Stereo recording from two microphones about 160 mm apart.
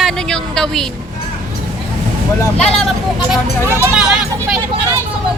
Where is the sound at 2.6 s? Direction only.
5° left (ahead or behind).